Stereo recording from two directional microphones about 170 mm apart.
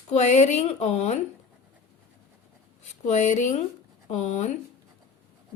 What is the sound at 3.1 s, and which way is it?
Speech, 45° left (ahead or behind).